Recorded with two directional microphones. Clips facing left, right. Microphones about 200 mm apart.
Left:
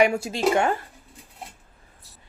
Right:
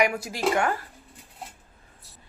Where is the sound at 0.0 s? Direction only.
30° left (ahead or behind).